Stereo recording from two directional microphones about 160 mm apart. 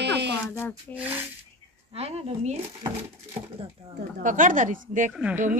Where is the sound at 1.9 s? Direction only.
40° right (ahead or behind).